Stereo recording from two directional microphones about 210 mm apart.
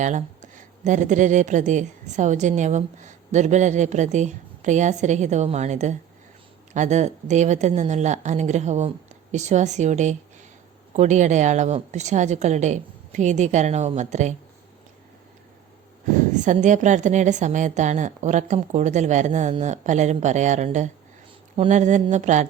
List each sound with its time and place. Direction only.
0.0 s speech: 35° right (ahead or behind)
16.3 s speech: 35° right (ahead or behind)